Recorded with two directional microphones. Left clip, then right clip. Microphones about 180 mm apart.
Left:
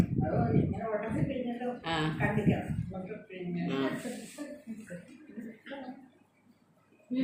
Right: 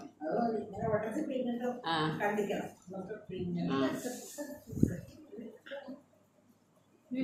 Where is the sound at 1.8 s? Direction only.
15° left (ahead or behind).